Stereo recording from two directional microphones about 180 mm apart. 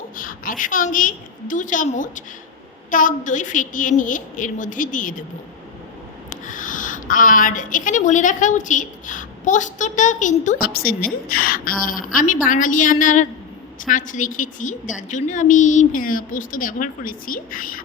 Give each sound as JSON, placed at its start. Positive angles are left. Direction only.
{"t": 0.2, "sound": "a woman's voice", "side_deg": 50}
{"t": 6.4, "sound": "a woman's voice", "side_deg": 45}